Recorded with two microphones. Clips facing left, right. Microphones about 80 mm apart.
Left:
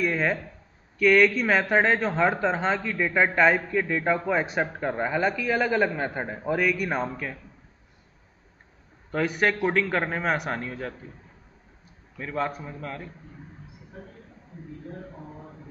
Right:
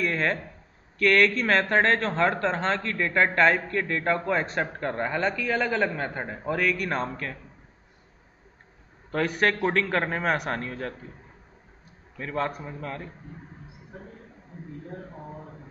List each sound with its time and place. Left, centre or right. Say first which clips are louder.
0.0 s a sound: left 1 dB; centre
0.9 s speech: left 2 dB; centre
9.1 s a man's voice: even; centre
12.2 s a man's voice: even; centre